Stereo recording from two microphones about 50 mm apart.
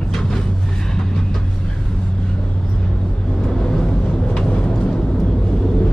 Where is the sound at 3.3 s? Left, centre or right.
Centre.